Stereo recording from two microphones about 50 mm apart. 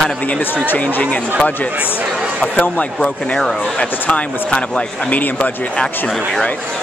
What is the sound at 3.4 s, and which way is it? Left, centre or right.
Speech, centre.